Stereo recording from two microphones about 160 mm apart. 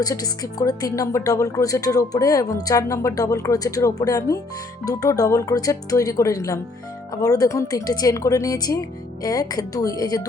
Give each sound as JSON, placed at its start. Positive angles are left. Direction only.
{"t": 0.0, "sound": "speech", "side_deg": 20}